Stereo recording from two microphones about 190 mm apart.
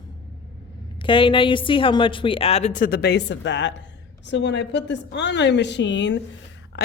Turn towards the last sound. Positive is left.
turn(degrees=65)  # may be behind; listen again after turning